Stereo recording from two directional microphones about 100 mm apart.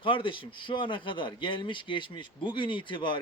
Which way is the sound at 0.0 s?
55° left (ahead or behind).